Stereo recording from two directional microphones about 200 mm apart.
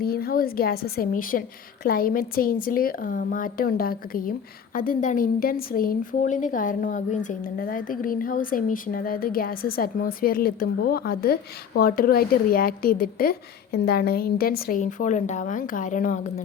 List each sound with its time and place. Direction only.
0.0 s a woman's voice: 50° left (ahead or behind)